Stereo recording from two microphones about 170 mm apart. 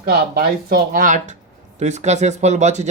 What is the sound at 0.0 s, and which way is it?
Speech, 60° right (ahead or behind).